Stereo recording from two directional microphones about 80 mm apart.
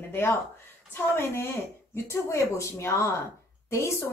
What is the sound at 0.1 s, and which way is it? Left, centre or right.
A woman's voice, left.